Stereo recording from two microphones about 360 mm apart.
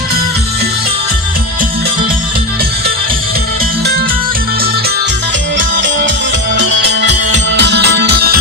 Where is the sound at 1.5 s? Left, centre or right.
Right.